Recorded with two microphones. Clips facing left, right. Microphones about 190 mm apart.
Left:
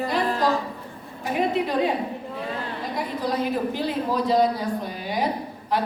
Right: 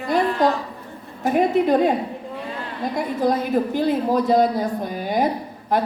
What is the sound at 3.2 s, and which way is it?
A woman's voice, 50° right (ahead or behind).